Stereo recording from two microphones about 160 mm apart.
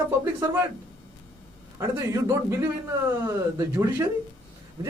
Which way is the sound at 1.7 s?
20° right (ahead or behind).